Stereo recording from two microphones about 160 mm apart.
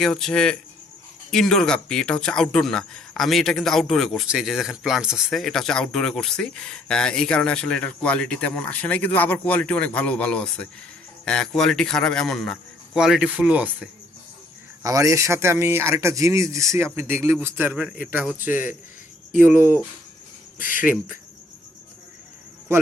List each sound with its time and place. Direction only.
0.0 s speech: 5° left (ahead or behind)
14.8 s speech: 20° right (ahead or behind)